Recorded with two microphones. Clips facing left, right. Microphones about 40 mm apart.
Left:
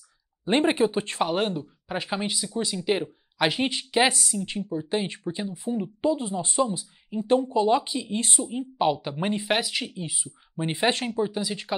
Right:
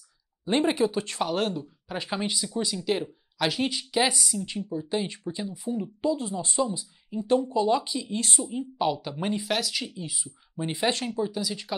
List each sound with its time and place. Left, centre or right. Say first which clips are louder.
0.5 s speech: left 2 dB; left
1.3 s speech: left 2 dB; centre
4.2 s speech: left 1 dB; centre
4.5 s speech: left 2 dB; left
8.5 s speech: left 3 dB; left
10.6 s speech: left 2 dB; left
11.1 s speech: left 2 dB; left